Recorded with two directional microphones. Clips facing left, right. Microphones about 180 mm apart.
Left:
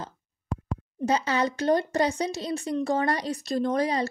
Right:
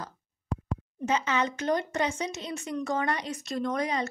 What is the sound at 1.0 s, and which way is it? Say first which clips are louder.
Speech: left 3 dB; 35° left (ahead or behind).